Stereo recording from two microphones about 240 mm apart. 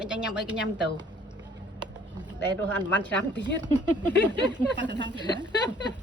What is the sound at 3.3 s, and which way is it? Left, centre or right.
Speech, centre.